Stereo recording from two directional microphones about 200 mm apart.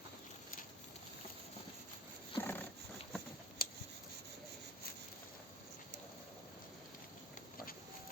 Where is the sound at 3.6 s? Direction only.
50° left (ahead or behind).